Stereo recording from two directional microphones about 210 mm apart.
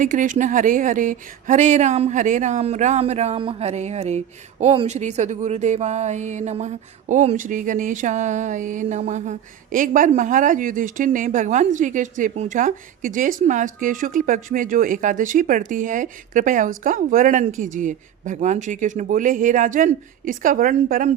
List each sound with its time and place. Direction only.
0.0 s speech: 40° right (ahead or behind)